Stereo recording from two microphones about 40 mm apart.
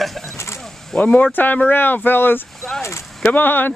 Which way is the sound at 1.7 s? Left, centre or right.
Left.